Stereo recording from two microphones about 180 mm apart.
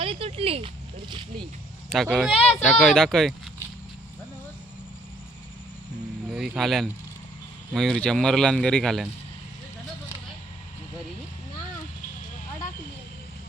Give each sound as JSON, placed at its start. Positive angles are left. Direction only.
{"t": 0.0, "sound": "a sound", "side_deg": -30}
{"t": 1.9, "sound": "a man's voice", "side_deg": 0}
{"t": 6.3, "sound": "a man's voice", "side_deg": 0}